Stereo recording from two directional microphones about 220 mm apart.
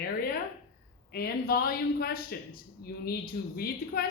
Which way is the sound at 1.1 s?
45° left (ahead or behind).